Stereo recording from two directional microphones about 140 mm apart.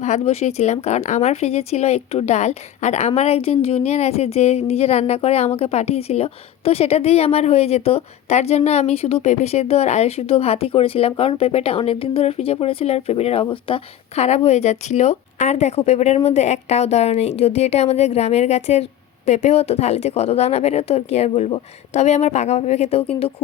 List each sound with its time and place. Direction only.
0.0 s a woman's voice: 55° left (ahead or behind)